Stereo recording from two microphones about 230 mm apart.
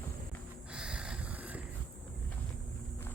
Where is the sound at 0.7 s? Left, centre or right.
Centre.